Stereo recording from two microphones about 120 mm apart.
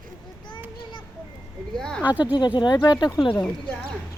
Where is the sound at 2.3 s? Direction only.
40° left (ahead or behind).